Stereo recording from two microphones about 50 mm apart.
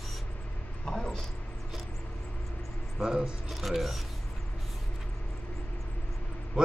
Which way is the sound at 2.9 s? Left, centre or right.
Centre.